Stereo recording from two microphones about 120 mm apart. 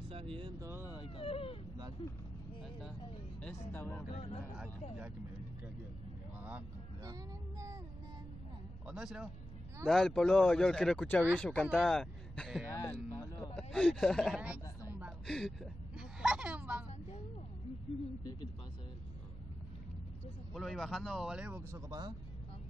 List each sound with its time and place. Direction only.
0.1 s vehicle: 50° right (ahead or behind)
0.6 s vehicle: 20° right (ahead or behind)
1.0 s a sound: 50° left (ahead or behind)
3.4 s speech: 15° left (ahead or behind)
4.1 s speech: 65° left (ahead or behind)
7.1 s child singing: 30° right (ahead or behind)
8.8 s speech: 5° right (ahead or behind)
12.9 s a sound: 20° left (ahead or behind)
13.6 s speech: 5° left (ahead or behind)
14.9 s a sound: 10° right (ahead or behind)
15.2 s a sound: 5° left (ahead or behind); by 16.8 s 10° right (ahead or behind)
20.5 s speech: centre (ahead or behind)
21.7 s speech: 30° right (ahead or behind)